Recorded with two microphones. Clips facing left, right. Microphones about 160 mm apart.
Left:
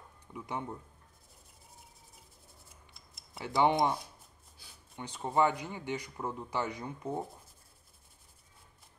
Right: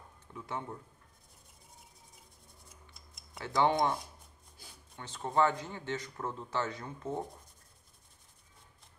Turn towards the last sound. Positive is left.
turn(degrees=15)  # may be behind; listen again after turning